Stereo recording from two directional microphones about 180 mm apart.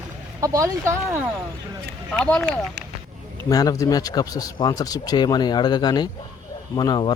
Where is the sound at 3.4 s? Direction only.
20° left (ahead or behind).